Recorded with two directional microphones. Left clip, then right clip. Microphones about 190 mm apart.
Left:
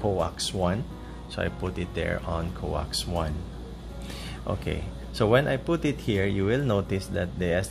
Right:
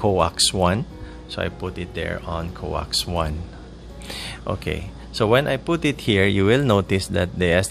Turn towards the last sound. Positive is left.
turn(degrees=-40)  # may be behind; listen again after turning